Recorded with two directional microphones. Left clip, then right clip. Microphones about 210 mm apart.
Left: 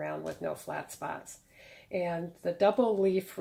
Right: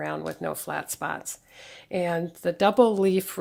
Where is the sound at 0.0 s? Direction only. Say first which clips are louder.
Right 5 dB; 40° right (ahead or behind).